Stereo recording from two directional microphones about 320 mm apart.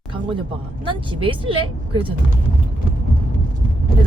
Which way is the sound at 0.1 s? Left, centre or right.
Centre.